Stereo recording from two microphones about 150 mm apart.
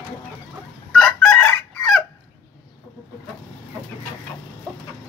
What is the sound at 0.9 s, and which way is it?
Chicken, 5° left (ahead or behind).